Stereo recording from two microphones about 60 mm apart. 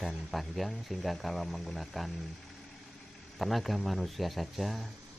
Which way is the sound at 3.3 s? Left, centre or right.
Centre.